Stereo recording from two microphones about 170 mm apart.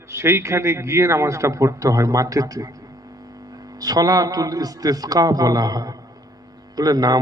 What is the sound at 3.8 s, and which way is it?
A man's voice, 20° right (ahead or behind).